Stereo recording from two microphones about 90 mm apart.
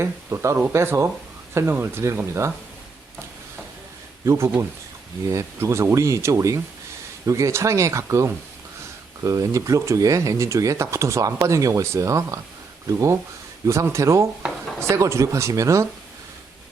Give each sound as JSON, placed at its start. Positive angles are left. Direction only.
{"t": 0.0, "sound": "speech", "side_deg": -30}
{"t": 4.3, "sound": "speech", "side_deg": -30}